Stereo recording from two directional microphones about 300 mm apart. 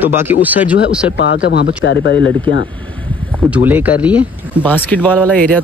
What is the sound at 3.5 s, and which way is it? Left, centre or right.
Speech, centre.